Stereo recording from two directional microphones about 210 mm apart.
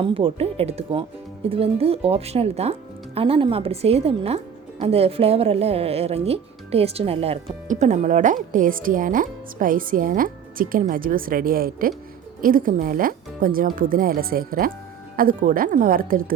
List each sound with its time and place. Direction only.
0.0 s speech: 25° right (ahead or behind); by 16.3 s 40° right (ahead or behind)